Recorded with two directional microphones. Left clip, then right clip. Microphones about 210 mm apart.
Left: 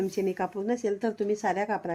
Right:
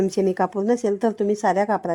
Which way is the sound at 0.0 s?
40° right (ahead or behind).